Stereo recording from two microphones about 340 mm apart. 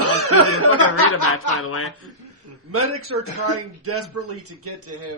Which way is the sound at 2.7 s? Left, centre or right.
Right.